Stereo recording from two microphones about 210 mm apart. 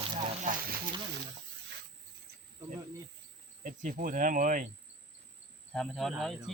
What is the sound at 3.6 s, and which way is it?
Speech, 40° right (ahead or behind).